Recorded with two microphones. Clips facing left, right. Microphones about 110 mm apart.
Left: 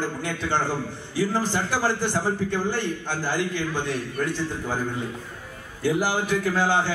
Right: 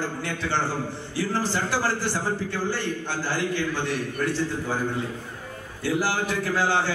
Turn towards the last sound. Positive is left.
turn(degrees=15)  # may be behind; listen again after turning